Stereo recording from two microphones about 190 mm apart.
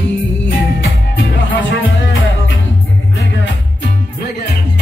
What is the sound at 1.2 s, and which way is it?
Music, 80° left.